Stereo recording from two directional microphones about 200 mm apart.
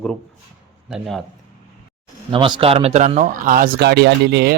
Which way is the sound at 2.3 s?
25° right (ahead or behind).